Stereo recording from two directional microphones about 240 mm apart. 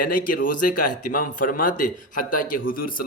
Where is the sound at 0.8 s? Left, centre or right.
Left.